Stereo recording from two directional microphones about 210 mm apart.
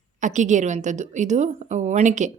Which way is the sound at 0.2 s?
35° right (ahead or behind).